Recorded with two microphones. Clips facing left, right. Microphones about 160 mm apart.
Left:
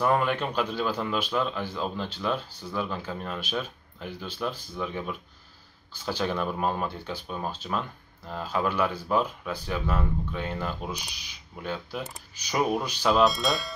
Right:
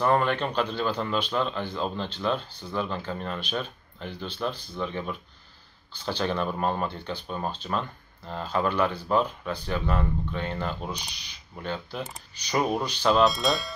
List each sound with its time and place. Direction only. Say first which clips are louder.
0.0 s speech: right 1 dB; 5° left (ahead or behind)